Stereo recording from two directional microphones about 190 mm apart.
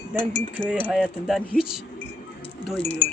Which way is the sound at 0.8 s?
Centre (ahead or behind).